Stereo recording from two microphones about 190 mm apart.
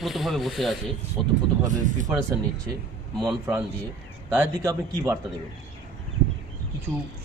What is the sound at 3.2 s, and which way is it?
Speech, 15° right (ahead or behind).